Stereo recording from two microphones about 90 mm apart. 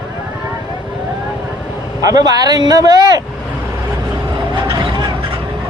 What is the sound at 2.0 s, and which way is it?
A man's voice, 45° right (ahead or behind).